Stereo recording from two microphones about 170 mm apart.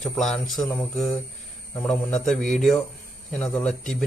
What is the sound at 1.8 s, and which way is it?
Speech, 5° left (ahead or behind).